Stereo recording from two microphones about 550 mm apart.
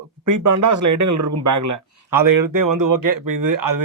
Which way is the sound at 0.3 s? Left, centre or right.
Right.